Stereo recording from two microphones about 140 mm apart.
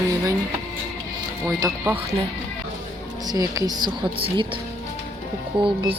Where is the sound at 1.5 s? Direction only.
20° right (ahead or behind).